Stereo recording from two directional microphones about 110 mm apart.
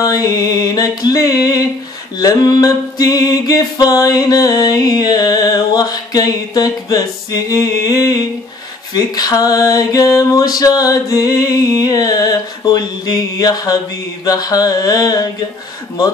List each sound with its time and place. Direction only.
0.0 s music: 35° left (ahead or behind)